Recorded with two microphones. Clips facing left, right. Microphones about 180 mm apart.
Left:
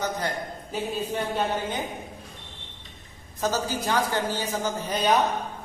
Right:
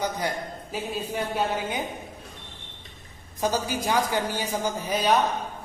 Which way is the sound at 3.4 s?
15° right (ahead or behind).